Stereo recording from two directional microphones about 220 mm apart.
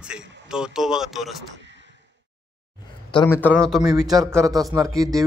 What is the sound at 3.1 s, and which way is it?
A man's voice, 10° left (ahead or behind).